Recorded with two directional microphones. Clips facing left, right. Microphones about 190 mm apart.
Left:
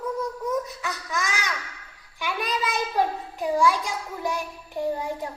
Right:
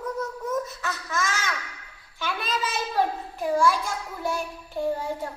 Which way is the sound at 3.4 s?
15° left (ahead or behind).